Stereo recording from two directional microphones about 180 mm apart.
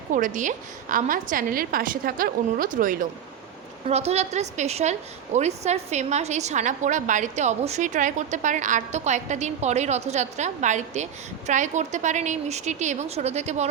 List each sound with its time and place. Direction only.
0.1 s a woman's voice: 45° right (ahead or behind)
3.8 s a woman's voice: 35° right (ahead or behind)